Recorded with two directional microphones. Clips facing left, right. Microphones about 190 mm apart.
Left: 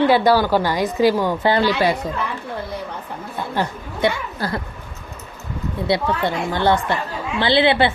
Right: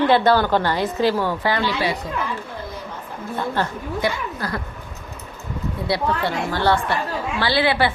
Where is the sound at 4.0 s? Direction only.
25° left (ahead or behind).